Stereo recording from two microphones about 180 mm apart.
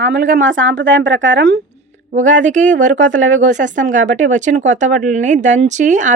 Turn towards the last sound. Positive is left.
turn(degrees=-45)  # may be behind; listen again after turning